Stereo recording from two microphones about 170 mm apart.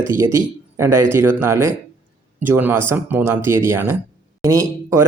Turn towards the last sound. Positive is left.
turn(degrees=-15)  # may be behind; listen again after turning